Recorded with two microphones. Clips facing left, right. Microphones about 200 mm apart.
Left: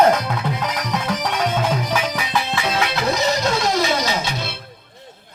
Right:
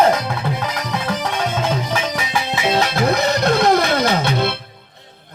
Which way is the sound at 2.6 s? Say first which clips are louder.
Right 7 dB; 40° right (ahead or behind).